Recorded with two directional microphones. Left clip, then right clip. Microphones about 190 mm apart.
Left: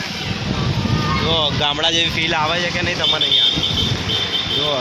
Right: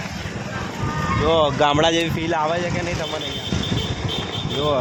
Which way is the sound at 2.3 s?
15° right (ahead or behind).